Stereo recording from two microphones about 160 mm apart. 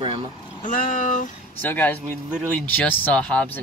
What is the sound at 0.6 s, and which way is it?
Speech, 55° left (ahead or behind).